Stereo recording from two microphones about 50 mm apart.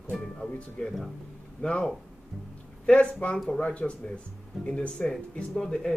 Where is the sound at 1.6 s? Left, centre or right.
Left.